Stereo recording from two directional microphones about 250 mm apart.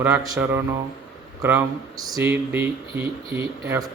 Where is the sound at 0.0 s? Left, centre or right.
Centre.